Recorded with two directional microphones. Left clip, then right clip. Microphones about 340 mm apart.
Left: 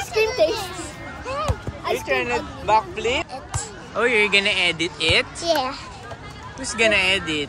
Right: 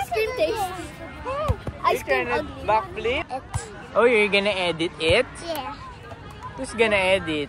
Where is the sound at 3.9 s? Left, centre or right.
Centre.